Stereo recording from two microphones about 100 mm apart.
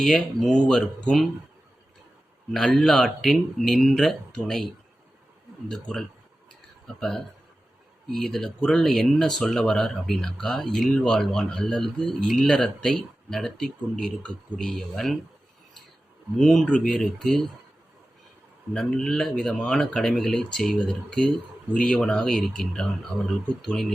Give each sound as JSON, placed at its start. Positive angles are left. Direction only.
{"t": 0.0, "sound": "speech", "side_deg": 5}
{"t": 2.5, "sound": "speech", "side_deg": 5}
{"t": 16.4, "sound": "speech", "side_deg": 5}
{"t": 18.7, "sound": "speech", "side_deg": 10}
{"t": 23.1, "sound": "speech", "side_deg": -25}
{"t": 23.6, "sound": "speech", "side_deg": 5}